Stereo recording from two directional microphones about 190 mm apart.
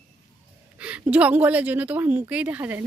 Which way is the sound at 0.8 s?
5° right (ahead or behind).